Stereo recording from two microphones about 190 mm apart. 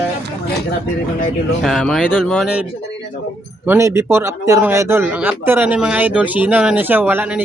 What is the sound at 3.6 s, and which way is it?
Speech, 15° right (ahead or behind).